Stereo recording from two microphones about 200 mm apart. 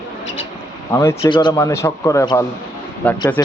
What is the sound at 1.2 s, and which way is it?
A man's voice, 25° left (ahead or behind).